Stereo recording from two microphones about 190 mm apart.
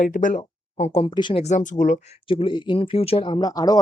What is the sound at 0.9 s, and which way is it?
Speech, 30° left (ahead or behind).